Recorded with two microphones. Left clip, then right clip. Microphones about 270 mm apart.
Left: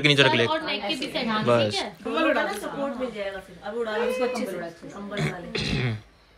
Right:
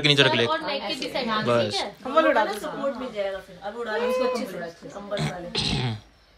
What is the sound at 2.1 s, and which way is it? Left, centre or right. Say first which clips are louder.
Speech: right 4 dB; centre.